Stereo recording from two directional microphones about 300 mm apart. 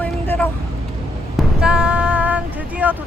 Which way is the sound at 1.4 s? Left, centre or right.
Centre.